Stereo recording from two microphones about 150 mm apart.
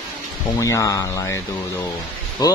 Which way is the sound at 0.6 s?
20° left (ahead or behind).